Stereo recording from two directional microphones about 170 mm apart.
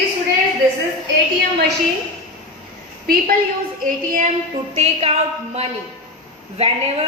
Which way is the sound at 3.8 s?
50° right (ahead or behind).